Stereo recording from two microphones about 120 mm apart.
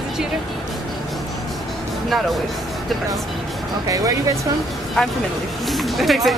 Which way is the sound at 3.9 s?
30° right (ahead or behind).